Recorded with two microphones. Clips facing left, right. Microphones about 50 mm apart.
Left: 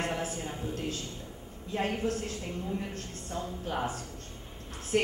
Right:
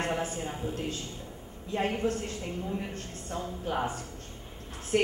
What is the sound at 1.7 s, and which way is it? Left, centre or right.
A woman's voice, centre.